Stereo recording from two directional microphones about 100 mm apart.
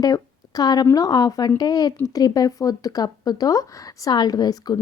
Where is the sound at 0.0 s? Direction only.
40° left (ahead or behind).